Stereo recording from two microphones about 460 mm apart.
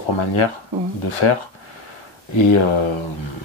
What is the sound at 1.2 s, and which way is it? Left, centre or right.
Speech, left.